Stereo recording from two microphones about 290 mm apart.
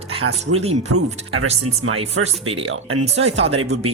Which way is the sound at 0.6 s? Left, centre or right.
Right.